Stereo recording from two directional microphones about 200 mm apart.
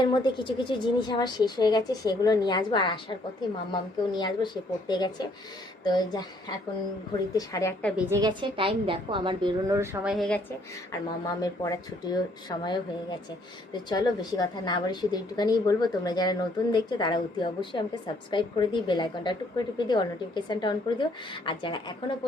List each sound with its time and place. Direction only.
0.0 s a woman's voice: 20° left (ahead or behind)
8.1 s a woman's voice: 20° right (ahead or behind); by 10.4 s 5° left (ahead or behind)
11.3 s a woman's voice: 15° left (ahead or behind)